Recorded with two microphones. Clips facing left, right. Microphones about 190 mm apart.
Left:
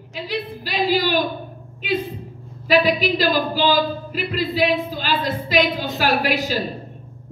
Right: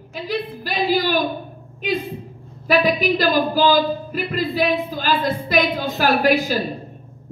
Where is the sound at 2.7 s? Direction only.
50° right (ahead or behind).